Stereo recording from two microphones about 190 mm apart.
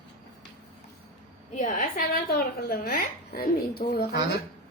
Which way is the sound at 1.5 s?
40° left (ahead or behind).